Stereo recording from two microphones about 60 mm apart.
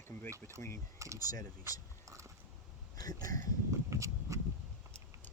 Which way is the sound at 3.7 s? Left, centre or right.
Right.